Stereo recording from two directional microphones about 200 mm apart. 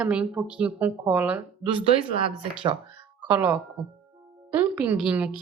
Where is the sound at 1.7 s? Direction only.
25° right (ahead or behind).